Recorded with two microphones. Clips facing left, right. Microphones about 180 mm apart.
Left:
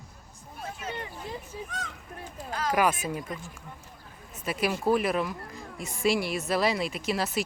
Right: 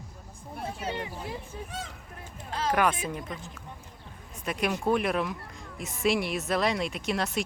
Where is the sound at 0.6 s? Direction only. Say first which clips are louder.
Right 3 dB; 30° right (ahead or behind).